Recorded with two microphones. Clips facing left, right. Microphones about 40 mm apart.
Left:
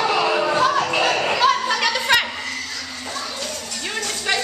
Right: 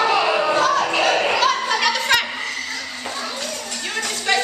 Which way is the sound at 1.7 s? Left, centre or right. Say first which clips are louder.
Even; centre.